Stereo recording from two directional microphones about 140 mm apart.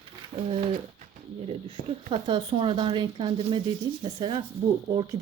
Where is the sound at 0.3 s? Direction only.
35° right (ahead or behind).